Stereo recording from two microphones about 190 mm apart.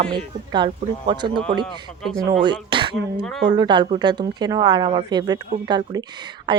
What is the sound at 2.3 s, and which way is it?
A woman's voice, 25° right (ahead or behind).